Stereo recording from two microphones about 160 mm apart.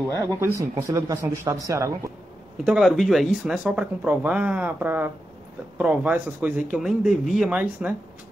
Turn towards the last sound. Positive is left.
turn(degrees=-10)  # may be behind; listen again after turning